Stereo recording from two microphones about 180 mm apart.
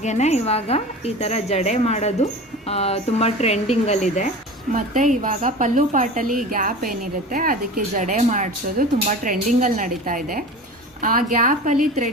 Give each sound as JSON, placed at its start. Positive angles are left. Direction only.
{"t": 0.0, "sound": "a woman's voice", "side_deg": 40}
{"t": 4.7, "sound": "a woman's voice", "side_deg": -45}